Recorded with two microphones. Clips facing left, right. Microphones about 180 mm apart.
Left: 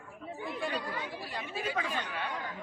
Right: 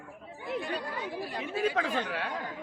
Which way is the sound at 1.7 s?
80° right.